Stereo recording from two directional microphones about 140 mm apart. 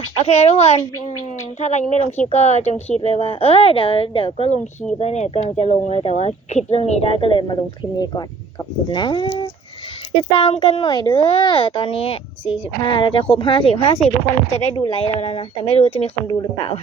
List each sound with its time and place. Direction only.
0.3 s a woman's voice: 50° left (ahead or behind)